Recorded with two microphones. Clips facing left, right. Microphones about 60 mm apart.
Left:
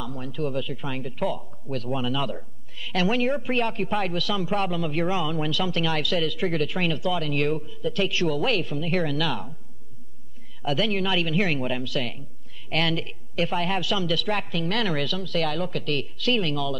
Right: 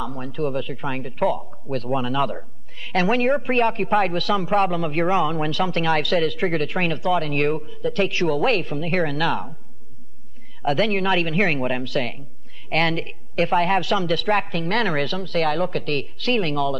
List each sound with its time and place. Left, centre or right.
0.0 s speech: right
10.6 s speech: right